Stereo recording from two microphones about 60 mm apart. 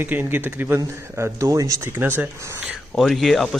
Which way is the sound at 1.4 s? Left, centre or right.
Right.